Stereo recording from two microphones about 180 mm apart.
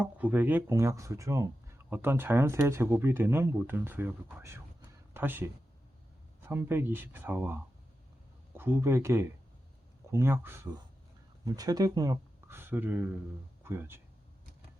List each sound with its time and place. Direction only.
0.0 s speech: 10° right (ahead or behind)